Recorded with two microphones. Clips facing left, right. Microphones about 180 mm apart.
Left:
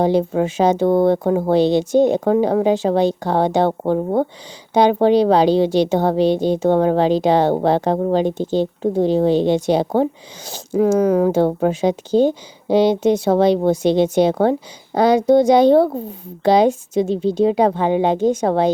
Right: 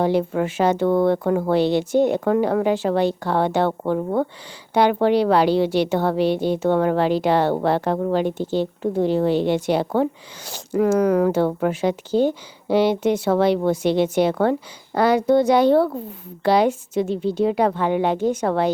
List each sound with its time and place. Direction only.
0.0 s a woman's voice: 20° left (ahead or behind)